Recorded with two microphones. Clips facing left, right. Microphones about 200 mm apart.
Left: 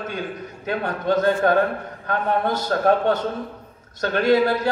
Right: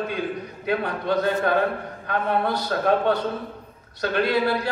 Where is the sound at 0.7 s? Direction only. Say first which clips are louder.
Left 1 dB; 45° left (ahead or behind).